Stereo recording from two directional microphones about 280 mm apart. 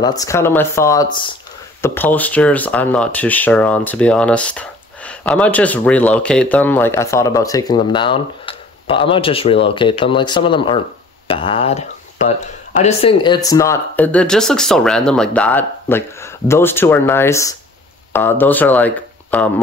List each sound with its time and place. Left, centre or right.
0.0 s speech: centre
1.8 s speech: centre